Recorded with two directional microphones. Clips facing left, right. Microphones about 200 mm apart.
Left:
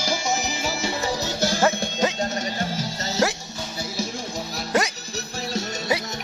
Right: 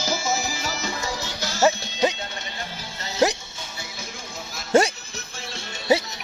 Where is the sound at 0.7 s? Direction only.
30° left (ahead or behind).